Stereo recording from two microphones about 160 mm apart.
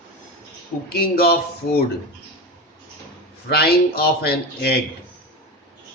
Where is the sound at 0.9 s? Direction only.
80° left.